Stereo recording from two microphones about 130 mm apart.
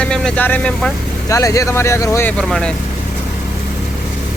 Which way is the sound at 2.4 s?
5° left (ahead or behind).